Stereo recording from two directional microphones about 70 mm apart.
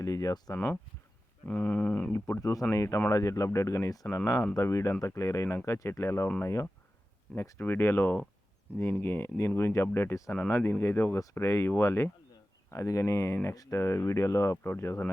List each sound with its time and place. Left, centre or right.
0.0 s speech: left
0.5 s a sound: left
2.1 s speech: left
2.7 s speech: left
7.6 s a sound: left
8.8 s speech: left
12.7 s speech: left